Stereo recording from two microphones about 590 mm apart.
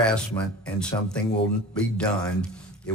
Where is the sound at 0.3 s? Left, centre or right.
Centre.